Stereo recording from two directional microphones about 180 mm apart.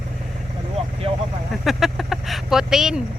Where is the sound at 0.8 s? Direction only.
35° right (ahead or behind).